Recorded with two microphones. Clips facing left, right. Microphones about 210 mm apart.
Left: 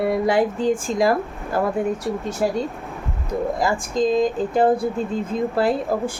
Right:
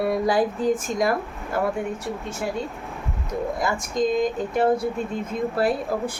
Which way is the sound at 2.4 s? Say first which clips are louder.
Left 7 dB; 40° left (ahead or behind).